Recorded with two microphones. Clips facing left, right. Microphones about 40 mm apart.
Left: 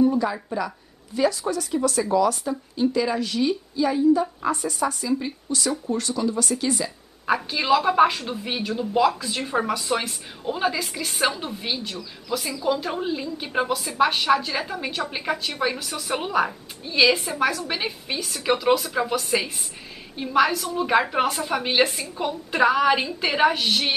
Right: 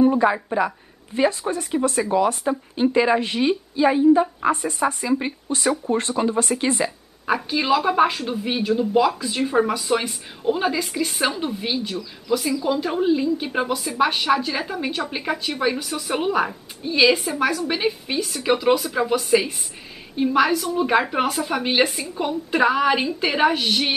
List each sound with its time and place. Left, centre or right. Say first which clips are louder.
0.0 s a woman's voice: right 4 dB; right
7.2 s a woman's voice: right 1 dB; centre